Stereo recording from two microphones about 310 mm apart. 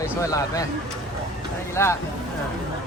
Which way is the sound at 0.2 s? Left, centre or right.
Centre.